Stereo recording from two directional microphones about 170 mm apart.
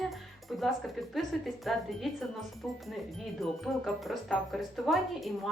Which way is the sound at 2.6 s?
Centre (ahead or behind).